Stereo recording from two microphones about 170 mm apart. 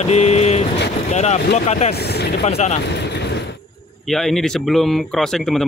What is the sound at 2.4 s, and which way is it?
Speech, 35° left (ahead or behind).